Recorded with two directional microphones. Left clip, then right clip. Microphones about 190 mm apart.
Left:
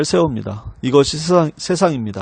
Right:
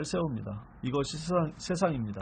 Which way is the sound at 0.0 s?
55° left (ahead or behind).